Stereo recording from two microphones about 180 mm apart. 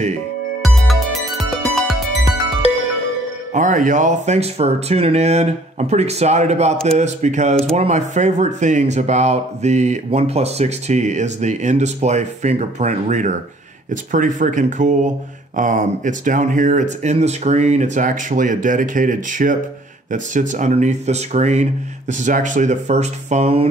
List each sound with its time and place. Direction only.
0.6 s music: centre (ahead or behind)
3.5 s speech: 45° right (ahead or behind)